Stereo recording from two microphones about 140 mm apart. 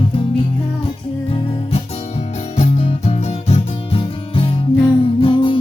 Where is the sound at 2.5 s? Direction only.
50° left (ahead or behind).